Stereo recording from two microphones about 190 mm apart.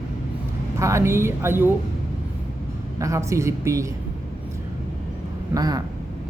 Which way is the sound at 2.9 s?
15° right (ahead or behind).